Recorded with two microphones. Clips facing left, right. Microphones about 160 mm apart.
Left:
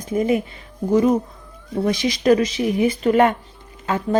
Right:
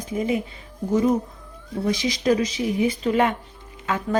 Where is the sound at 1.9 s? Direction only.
65° left (ahead or behind).